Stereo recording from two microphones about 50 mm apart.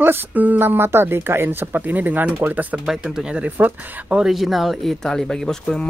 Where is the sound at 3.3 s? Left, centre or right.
Right.